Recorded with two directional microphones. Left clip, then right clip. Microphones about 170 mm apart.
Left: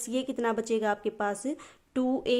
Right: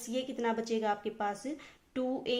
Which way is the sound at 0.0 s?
50° left (ahead or behind).